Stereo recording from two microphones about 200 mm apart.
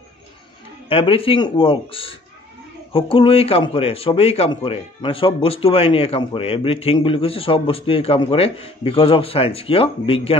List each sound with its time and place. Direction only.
0.8 s a man's voice: 25° left (ahead or behind)